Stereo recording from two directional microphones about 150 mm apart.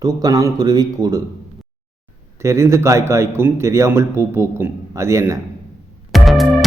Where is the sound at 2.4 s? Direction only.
20° right (ahead or behind).